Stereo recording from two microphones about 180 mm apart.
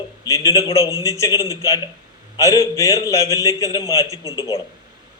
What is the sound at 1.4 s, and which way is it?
Speech, 20° right (ahead or behind).